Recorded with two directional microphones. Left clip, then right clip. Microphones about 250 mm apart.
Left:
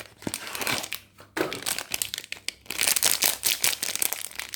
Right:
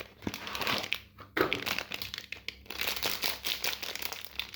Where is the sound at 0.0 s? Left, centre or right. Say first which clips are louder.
Left 4 dB; centre.